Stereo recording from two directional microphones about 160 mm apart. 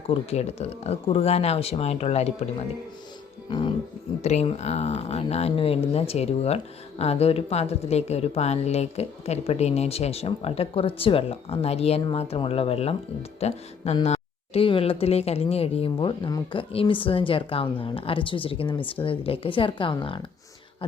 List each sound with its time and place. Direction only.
0.1 s speech: 40° left (ahead or behind)
3.5 s speech: 30° left (ahead or behind)
4.2 s speech: 40° left (ahead or behind)